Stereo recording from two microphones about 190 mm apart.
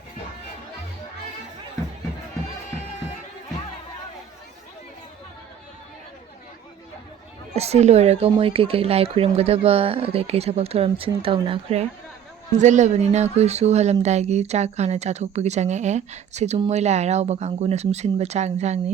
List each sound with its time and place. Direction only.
7.5 s speech: 35° right (ahead or behind)